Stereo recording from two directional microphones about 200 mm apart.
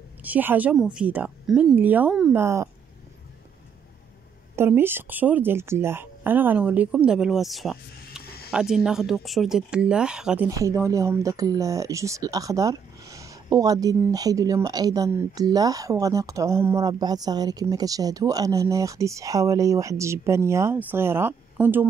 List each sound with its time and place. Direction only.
0.2 s speech: 10° right (ahead or behind)
4.6 s speech: 10° right (ahead or behind)
8.2 s a sound: 50° left (ahead or behind)
8.5 s speech: 5° right (ahead or behind)